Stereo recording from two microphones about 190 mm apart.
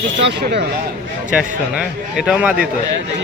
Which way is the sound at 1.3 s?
5° right (ahead or behind).